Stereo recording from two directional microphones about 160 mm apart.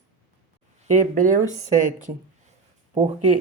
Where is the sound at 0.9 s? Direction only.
55° right (ahead or behind).